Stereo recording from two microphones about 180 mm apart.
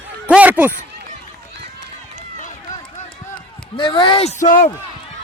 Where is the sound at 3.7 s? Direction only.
25° left (ahead or behind).